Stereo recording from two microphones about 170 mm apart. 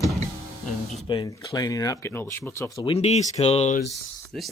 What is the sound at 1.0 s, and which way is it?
Speech, 25° left (ahead or behind).